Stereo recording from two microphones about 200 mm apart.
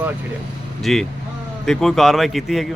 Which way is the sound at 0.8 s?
Centre (ahead or behind).